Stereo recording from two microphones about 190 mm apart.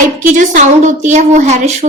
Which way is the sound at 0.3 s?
40° right (ahead or behind).